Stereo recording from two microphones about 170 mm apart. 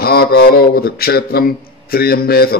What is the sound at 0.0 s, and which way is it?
Speech, 65° left (ahead or behind).